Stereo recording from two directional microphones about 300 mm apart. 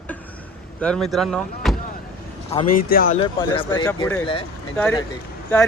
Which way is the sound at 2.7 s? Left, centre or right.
Left.